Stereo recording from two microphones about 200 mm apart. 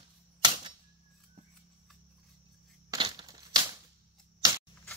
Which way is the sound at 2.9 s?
25° right (ahead or behind).